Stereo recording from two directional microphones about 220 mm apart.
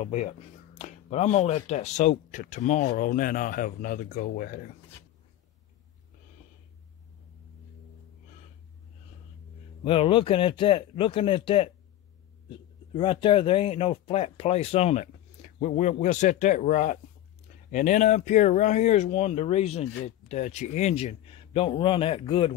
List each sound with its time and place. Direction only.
0.0 s speech: 30° left (ahead or behind)
9.8 s speech: 25° left (ahead or behind)